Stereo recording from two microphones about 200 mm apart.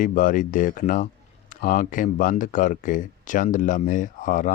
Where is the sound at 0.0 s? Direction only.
40° left (ahead or behind).